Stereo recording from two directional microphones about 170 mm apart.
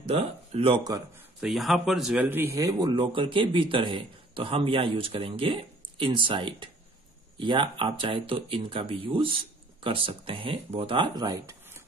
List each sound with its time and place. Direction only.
0.0 s speech: 35° right (ahead or behind)
1.4 s speech: centre (ahead or behind); by 11.8 s 20° right (ahead or behind)